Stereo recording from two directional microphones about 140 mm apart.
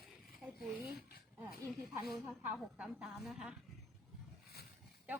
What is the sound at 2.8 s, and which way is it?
Speech, 5° right (ahead or behind).